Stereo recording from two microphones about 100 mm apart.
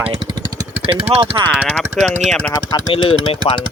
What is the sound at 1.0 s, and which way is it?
Speech, 65° right (ahead or behind).